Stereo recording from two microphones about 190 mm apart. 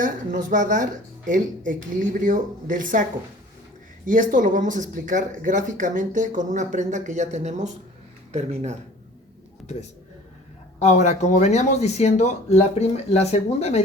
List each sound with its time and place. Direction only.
0.0 s speech: 45° right (ahead or behind)
10.8 s speech: 35° left (ahead or behind)